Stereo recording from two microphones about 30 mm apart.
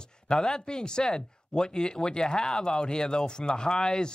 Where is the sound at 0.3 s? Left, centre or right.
Left.